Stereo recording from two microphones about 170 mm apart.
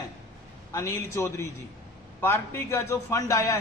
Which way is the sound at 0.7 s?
15° left (ahead or behind).